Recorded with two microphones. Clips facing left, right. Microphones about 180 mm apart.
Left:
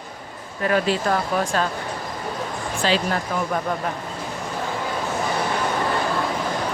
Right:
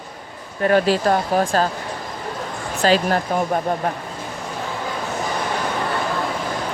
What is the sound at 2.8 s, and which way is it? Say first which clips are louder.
Speech: right 5 dB; 40° right (ahead or behind).